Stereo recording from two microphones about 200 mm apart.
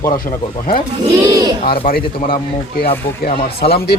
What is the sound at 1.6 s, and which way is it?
A man's voice, 50° left (ahead or behind).